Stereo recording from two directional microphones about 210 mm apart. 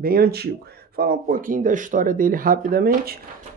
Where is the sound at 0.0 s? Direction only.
45° right (ahead or behind).